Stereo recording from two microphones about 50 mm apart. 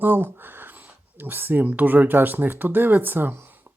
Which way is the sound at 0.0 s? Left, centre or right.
Right.